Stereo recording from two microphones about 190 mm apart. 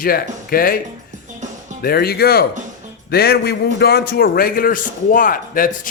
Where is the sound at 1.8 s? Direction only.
55° left (ahead or behind).